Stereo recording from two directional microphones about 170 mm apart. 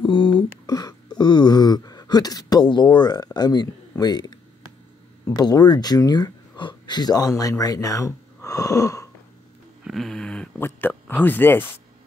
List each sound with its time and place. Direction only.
0.0 s speech: 30° left (ahead or behind)
9.8 s speech: centre (ahead or behind)